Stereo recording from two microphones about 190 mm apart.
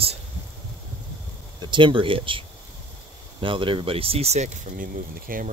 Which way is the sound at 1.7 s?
25° right (ahead or behind).